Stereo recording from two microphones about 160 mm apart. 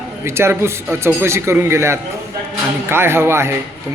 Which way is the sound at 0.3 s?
15° right (ahead or behind).